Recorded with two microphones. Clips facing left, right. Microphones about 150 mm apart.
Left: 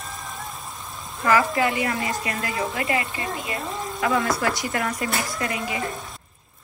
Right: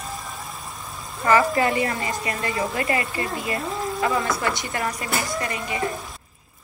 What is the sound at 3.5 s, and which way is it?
Speech, centre (ahead or behind).